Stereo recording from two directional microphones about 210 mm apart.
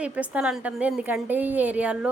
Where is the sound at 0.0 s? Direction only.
5° right (ahead or behind).